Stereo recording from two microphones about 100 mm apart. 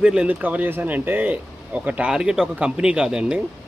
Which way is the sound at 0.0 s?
10° right (ahead or behind).